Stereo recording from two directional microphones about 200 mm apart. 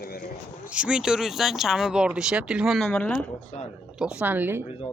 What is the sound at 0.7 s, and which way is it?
Speech, 5° right (ahead or behind).